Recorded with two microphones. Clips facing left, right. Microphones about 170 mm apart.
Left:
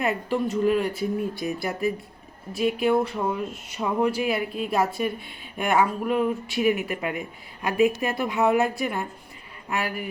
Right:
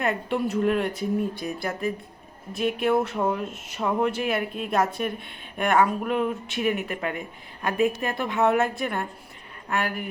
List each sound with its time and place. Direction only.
0.0 s speech: centre (ahead or behind)